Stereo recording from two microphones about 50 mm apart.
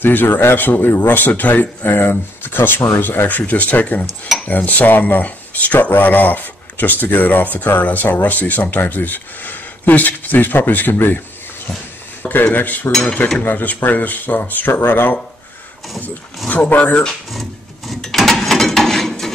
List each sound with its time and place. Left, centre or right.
0.0 s speech: left
12.2 s speech: left
12.9 s cutlery: left
13.4 s speech: left
16.4 s speech: left
17.3 s a sound: centre
18.0 s mechanisms: centre